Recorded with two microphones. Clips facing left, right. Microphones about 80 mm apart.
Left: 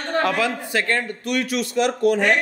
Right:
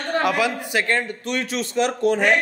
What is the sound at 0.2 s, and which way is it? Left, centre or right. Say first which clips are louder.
A man's voice: left 1 dB; centre.